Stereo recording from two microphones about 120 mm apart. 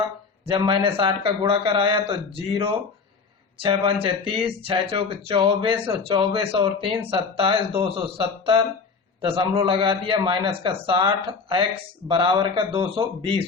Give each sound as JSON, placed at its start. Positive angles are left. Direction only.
{"t": 0.4, "sound": "speech", "side_deg": -45}